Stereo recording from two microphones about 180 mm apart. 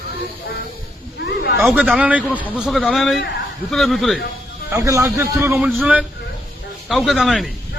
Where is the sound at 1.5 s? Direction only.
Centre (ahead or behind).